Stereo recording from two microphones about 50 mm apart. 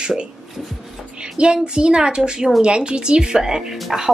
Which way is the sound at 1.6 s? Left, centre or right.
Centre.